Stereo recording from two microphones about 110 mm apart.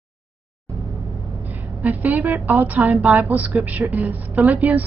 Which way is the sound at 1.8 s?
15° right (ahead or behind).